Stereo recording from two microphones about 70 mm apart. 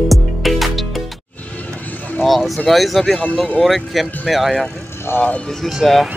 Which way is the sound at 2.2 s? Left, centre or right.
Centre.